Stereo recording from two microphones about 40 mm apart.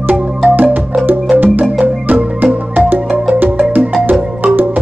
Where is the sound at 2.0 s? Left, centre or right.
Right.